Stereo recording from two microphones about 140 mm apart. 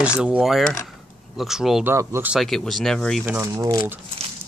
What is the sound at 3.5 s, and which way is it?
Speech, 30° right (ahead or behind).